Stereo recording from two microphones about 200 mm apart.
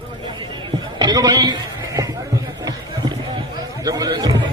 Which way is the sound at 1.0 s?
20° right (ahead or behind).